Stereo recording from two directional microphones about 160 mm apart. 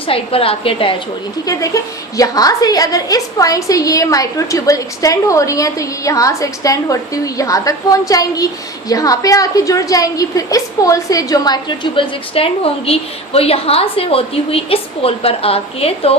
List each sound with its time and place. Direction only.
0.1 s a woman's voice: 35° left (ahead or behind)
1.5 s a woman's voice: 20° left (ahead or behind); by 16.1 s 40° left (ahead or behind)